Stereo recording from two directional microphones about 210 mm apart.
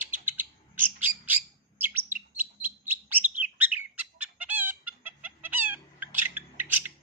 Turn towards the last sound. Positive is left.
turn(degrees=-10)  # may be behind; listen again after turning